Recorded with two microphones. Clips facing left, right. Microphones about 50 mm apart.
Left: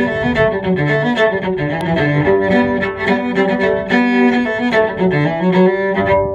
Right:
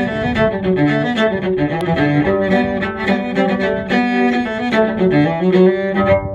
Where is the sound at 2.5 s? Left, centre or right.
Left.